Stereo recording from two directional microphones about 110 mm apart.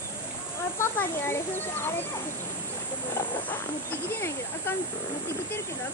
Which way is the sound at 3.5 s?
20° left (ahead or behind).